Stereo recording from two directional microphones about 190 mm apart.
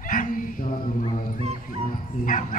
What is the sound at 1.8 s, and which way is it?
Bow-wow, 45° left (ahead or behind).